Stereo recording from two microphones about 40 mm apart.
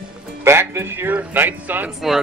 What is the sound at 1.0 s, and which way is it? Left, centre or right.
Speech, right.